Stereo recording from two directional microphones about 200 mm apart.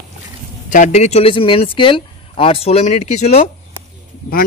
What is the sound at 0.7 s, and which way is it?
Speech, 35° left (ahead or behind).